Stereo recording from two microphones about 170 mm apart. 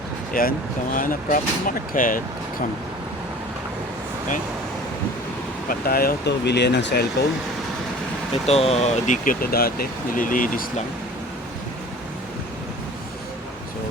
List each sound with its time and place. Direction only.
0.4 s speech: 60° left (ahead or behind)
5.6 s speech: 60° left (ahead or behind); by 7.0 s 90° left
8.4 s speech: 40° left (ahead or behind)